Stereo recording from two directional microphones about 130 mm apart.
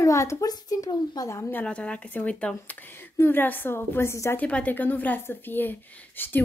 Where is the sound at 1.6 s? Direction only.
10° left (ahead or behind).